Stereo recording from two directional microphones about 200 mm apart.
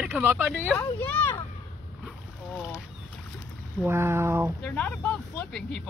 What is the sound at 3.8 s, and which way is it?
Speech, 10° right (ahead or behind).